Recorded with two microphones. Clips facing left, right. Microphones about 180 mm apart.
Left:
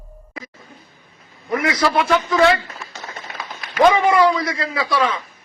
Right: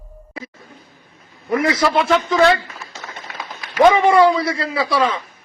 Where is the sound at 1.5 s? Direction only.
25° right (ahead or behind).